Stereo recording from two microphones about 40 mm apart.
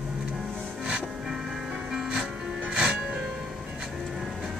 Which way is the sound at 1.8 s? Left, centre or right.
Centre.